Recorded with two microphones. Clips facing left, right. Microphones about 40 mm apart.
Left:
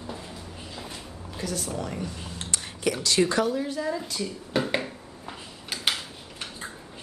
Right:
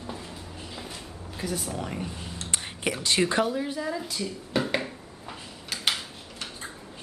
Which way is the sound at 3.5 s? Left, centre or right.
Centre.